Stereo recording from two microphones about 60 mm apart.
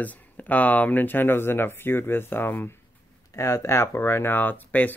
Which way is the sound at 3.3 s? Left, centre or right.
Left.